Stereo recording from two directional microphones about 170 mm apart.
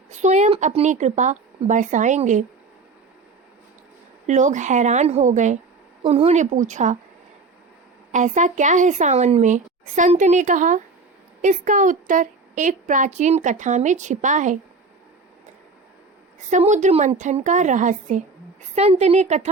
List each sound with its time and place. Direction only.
0.1 s a woman's voice: 45° right (ahead or behind)
4.3 s a woman's voice: 45° right (ahead or behind)
8.1 s a woman's voice: 45° right (ahead or behind)
16.5 s a woman's voice: 45° right (ahead or behind)